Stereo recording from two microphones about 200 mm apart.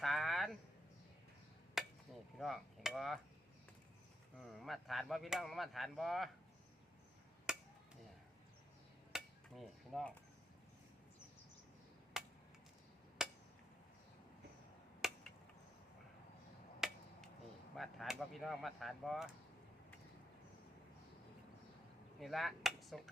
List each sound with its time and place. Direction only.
0.0 s a sound: centre (ahead or behind)
1.8 s chop: centre (ahead or behind)
2.4 s speech: centre (ahead or behind)
4.4 s speech: centre (ahead or behind)
7.5 s chop: 5° right (ahead or behind)
9.1 s dishes: centre (ahead or behind)
12.1 s a sound: centre (ahead or behind)
15.0 s chop: centre (ahead or behind)
16.8 s finger snapping: centre (ahead or behind)
17.7 s speech: centre (ahead or behind)
22.2 s speech: centre (ahead or behind)